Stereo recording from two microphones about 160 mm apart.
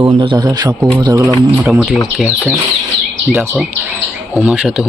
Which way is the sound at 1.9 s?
15° left (ahead or behind).